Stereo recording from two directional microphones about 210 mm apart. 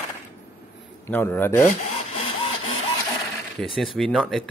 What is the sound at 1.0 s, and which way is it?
Speech, 10° left (ahead or behind).